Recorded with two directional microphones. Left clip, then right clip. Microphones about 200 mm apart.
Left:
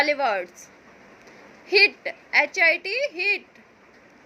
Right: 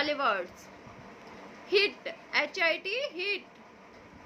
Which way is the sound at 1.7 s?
25° left (ahead or behind).